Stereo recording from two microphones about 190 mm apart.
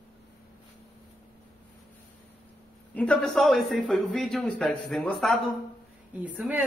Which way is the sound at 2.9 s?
5° left (ahead or behind).